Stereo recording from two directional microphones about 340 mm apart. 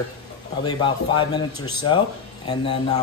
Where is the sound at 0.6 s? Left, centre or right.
Centre.